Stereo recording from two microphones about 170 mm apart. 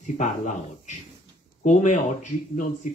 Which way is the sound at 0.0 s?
45° left (ahead or behind).